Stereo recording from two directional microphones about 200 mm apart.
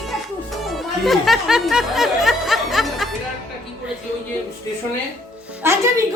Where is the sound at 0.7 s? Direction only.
Centre (ahead or behind).